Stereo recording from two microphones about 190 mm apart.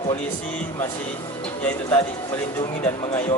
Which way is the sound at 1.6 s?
10° left (ahead or behind).